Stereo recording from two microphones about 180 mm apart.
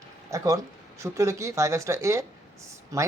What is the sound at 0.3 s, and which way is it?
Speech, 20° right (ahead or behind).